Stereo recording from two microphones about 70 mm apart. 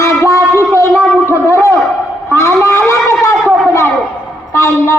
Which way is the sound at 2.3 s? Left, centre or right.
Left.